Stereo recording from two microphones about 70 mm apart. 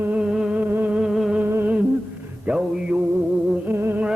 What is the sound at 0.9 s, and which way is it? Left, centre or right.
Music, centre.